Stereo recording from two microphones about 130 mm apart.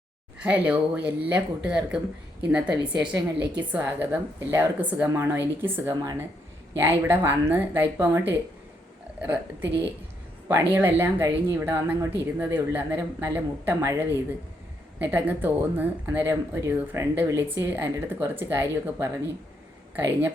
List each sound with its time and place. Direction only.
0.3 s speech: 10° right (ahead or behind)